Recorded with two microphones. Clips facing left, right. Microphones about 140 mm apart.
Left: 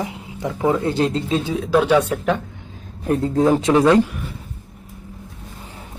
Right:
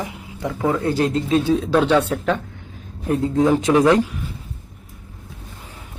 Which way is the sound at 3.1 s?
35° left (ahead or behind).